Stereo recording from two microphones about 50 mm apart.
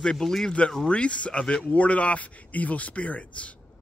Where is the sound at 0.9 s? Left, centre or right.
Left.